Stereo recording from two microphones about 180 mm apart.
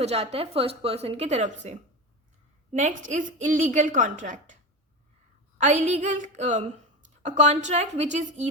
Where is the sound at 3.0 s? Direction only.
45° right (ahead or behind).